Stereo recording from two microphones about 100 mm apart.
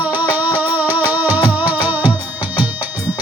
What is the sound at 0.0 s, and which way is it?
Music, 20° right (ahead or behind).